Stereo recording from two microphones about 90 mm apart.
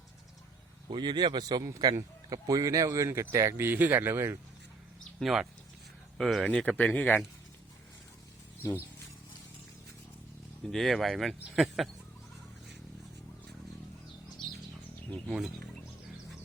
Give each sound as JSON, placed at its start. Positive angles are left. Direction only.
{"t": 0.9, "sound": "speech", "side_deg": -55}
{"t": 5.2, "sound": "speech", "side_deg": 0}
{"t": 8.6, "sound": "speech", "side_deg": 40}
{"t": 10.6, "sound": "speech", "side_deg": 5}
{"t": 15.3, "sound": "speech", "side_deg": -5}